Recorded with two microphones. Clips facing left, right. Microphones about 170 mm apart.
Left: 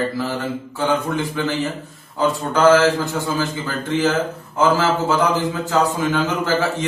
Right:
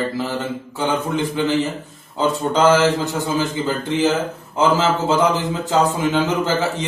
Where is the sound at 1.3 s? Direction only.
20° right (ahead or behind).